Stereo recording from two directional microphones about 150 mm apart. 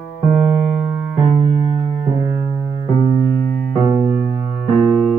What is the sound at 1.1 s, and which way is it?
Keyboard, 35° right (ahead or behind).